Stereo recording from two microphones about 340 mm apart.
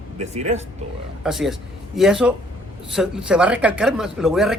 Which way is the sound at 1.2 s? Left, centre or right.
Centre.